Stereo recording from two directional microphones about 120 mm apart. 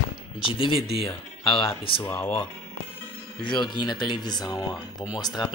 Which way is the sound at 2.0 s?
20° left (ahead or behind).